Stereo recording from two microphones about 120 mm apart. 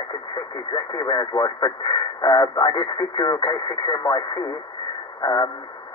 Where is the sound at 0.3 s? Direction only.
35° left (ahead or behind).